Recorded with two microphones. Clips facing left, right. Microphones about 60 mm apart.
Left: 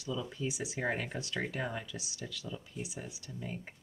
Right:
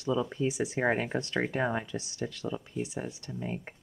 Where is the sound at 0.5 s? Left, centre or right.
Right.